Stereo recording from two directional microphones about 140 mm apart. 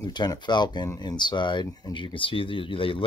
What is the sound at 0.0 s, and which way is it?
Speech, 30° left (ahead or behind).